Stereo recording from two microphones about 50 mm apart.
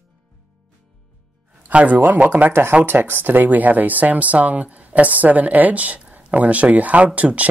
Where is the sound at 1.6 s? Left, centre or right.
Right.